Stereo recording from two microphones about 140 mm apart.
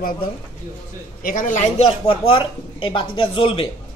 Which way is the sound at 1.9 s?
40° left (ahead or behind).